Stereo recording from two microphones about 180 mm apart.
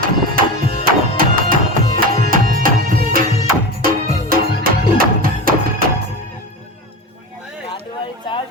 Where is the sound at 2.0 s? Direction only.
50° right (ahead or behind).